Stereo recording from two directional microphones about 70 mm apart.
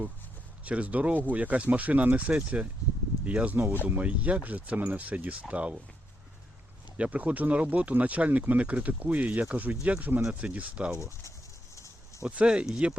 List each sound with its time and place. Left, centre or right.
0.6 s speech: centre
6.9 s speech: centre
10.9 s speech: left
11.7 s a sound: left
12.2 s speech: centre